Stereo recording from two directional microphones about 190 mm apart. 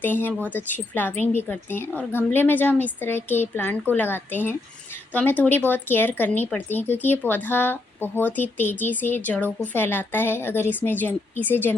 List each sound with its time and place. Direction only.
0.0 s speech: 10° left (ahead or behind)